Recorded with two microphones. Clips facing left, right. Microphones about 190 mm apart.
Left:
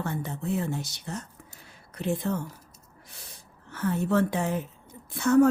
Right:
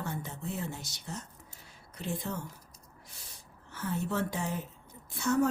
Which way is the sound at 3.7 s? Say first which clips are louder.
Left 8 dB; 65° left (ahead or behind).